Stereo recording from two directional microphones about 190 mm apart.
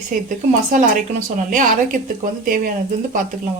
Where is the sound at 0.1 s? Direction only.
45° right (ahead or behind).